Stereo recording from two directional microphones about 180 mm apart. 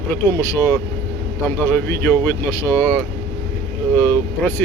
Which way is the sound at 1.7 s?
10° left (ahead or behind).